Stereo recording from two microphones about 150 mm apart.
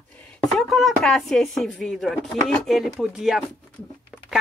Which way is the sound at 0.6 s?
Centre (ahead or behind).